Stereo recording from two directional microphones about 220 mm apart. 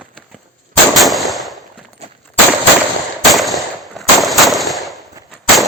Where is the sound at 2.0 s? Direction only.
30° right (ahead or behind).